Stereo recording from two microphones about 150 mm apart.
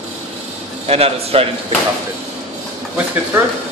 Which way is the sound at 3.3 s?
10° right (ahead or behind).